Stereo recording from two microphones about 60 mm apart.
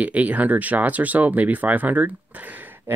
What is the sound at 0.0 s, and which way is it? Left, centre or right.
Speech, right.